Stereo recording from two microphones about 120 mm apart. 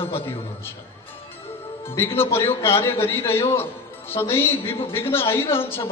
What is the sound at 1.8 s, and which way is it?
A man's voice, 20° left (ahead or behind).